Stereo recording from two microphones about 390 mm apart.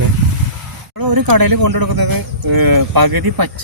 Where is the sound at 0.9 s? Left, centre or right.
Right.